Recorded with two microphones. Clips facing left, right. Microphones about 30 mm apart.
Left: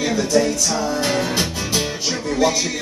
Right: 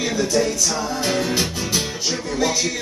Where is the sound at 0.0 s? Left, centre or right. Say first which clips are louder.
Left 2 dB; centre.